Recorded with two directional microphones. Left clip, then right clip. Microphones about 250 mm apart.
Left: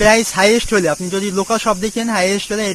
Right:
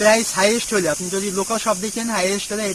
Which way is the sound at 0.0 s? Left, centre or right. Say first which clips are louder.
Left 4 dB; left.